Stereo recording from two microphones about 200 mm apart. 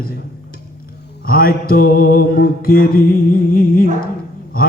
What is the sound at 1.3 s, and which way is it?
Music, 50° left (ahead or behind).